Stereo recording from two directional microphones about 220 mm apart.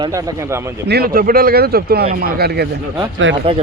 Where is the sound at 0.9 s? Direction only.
45° right (ahead or behind).